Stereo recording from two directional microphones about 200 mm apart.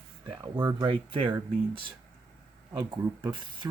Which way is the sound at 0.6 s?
15° right (ahead or behind).